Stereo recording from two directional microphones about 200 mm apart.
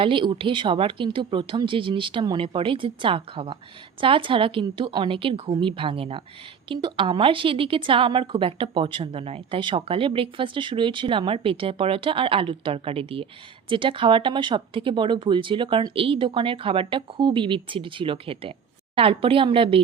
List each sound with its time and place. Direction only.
0.0 s a woman's voice: 25° right (ahead or behind)